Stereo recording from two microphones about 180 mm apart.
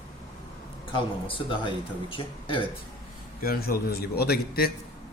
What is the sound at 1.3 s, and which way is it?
Speech, 25° left (ahead or behind).